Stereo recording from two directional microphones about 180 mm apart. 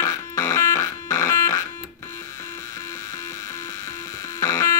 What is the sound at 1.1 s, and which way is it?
Synthesizer, 15° left (ahead or behind).